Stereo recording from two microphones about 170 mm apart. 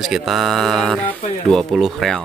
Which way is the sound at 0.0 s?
Centre (ahead or behind).